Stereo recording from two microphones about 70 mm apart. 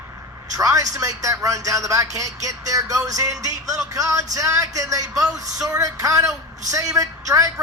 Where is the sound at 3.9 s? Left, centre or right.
Right.